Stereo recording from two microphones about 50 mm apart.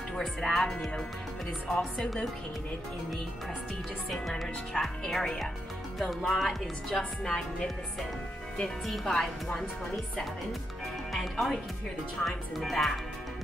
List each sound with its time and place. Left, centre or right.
0.2 s a woman's voice: centre
4.7 s a woman's voice: centre
5.1 s a woman's voice: centre
8.6 s a woman's voice: centre
11.1 s speech: centre